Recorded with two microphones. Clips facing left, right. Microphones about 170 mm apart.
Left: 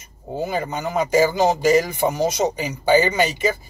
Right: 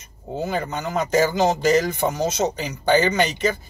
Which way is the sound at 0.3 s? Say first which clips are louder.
Left 1 dB; 10° left (ahead or behind).